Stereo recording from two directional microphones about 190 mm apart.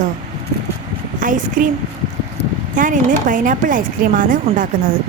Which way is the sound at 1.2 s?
45° right (ahead or behind).